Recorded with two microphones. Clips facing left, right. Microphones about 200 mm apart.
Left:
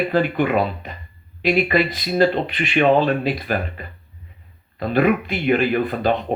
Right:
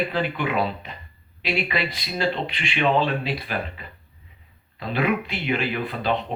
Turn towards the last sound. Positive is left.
turn(degrees=50)  # may be behind; listen again after turning